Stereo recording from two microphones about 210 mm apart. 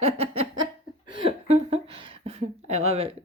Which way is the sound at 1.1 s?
25° right (ahead or behind).